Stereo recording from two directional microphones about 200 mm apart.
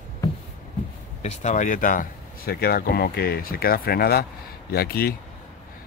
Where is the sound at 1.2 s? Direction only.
35° left (ahead or behind).